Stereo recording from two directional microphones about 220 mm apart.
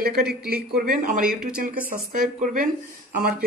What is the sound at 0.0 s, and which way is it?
A man's voice, 45° right (ahead or behind).